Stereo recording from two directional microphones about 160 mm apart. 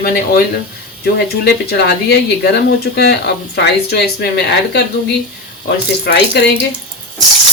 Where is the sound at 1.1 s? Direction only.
90° left.